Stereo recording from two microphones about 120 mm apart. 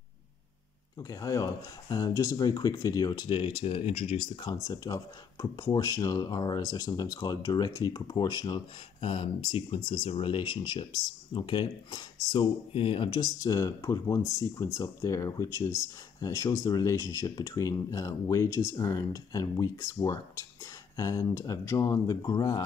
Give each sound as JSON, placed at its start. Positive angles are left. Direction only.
{"t": 0.9, "sound": "speech", "side_deg": 30}
{"t": 4.6, "sound": "speech", "side_deg": 30}
{"t": 12.7, "sound": "speech", "side_deg": 50}